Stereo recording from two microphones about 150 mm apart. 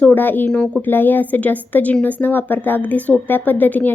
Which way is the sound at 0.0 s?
10° left (ahead or behind).